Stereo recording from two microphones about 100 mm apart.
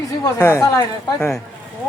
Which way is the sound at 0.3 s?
35° left (ahead or behind).